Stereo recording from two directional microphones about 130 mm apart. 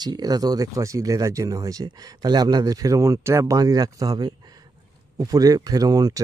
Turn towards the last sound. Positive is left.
turn(degrees=-30)  # may be behind; listen again after turning